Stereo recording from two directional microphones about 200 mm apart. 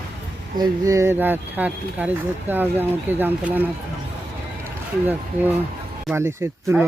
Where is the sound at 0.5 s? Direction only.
20° right (ahead or behind).